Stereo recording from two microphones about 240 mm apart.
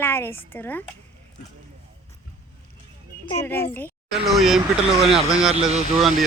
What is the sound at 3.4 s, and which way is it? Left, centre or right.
A woman's voice, centre.